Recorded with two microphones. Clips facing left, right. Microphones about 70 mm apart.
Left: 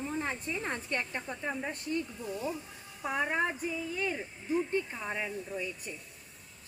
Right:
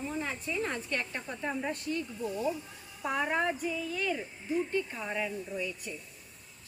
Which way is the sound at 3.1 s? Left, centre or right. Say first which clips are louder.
Right 1 dB; centre.